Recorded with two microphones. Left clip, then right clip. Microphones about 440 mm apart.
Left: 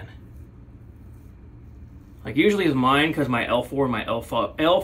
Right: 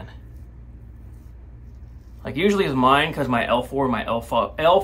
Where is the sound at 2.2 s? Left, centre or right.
Right.